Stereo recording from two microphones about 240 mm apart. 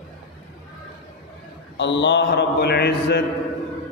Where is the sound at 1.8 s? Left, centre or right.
Left.